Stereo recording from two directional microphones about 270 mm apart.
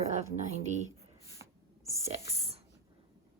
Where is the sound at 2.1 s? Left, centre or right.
Right.